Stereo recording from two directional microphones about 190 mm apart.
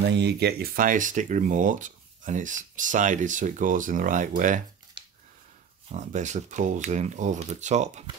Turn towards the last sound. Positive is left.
turn(degrees=-35)  # may be behind; listen again after turning